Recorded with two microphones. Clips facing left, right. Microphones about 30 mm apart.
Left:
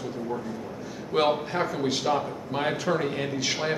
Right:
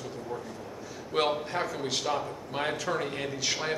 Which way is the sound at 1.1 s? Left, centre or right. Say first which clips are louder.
Left 4 dB; centre.